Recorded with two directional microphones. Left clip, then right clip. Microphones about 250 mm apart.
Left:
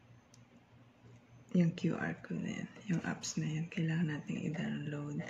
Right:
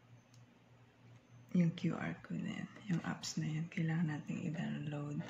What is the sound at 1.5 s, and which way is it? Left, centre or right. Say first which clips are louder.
Speech: left 4 dB; centre.